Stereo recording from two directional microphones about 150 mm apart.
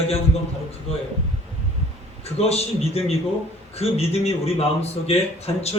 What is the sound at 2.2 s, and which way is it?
A man's voice, 45° left (ahead or behind).